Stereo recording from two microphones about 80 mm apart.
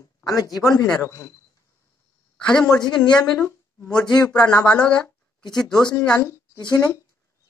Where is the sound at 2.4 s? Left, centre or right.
Centre.